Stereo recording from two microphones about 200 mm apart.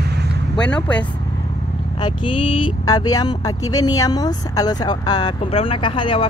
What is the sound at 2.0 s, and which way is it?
Speech, 25° left (ahead or behind).